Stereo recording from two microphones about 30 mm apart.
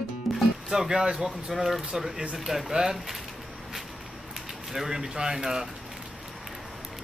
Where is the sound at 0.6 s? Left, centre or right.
Centre.